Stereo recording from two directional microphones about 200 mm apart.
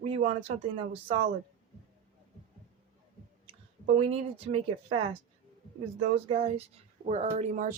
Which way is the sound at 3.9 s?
30° right (ahead or behind).